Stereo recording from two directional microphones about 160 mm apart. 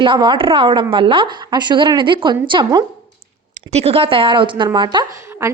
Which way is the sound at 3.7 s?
40° right (ahead or behind).